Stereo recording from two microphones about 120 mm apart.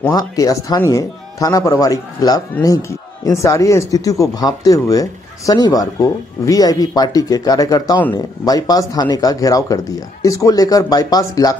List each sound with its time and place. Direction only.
0.1 s speech: 30° left (ahead or behind)